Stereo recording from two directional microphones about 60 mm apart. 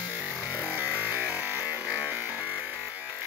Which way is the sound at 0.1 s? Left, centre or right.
Right.